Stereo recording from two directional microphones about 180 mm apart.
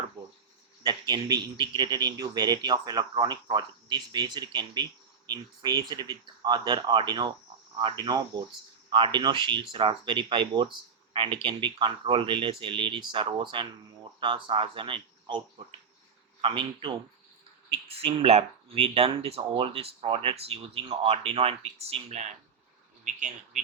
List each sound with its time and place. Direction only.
0.8 s a man's voice: 25° right (ahead or behind); by 23.6 s 40° right (ahead or behind)